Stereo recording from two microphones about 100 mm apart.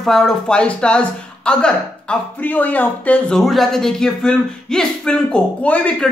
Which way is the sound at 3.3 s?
Centre (ahead or behind).